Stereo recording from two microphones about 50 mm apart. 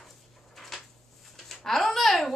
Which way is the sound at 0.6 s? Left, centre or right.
Centre.